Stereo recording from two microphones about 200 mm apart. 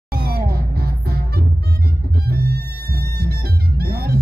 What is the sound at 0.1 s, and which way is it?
Music, 50° right (ahead or behind).